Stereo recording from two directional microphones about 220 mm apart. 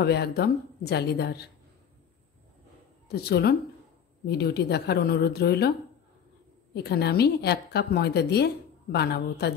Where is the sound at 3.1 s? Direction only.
45° left (ahead or behind).